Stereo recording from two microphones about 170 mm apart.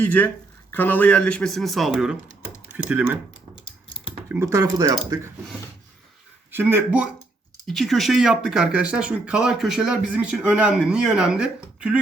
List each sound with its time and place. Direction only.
0.0 s speech: 10° left (ahead or behind); by 3.2 s 10° right (ahead or behind)
4.3 s speech: 15° right (ahead or behind)
6.5 s speech: 10° right (ahead or behind)
7.7 s speech: centre (ahead or behind)